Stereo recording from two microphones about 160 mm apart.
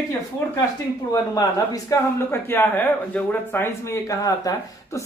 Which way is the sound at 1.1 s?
20° left (ahead or behind).